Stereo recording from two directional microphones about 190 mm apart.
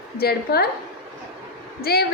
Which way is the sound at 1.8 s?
55° left (ahead or behind).